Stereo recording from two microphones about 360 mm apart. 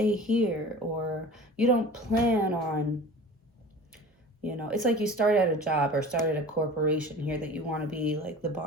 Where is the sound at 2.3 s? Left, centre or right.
Centre.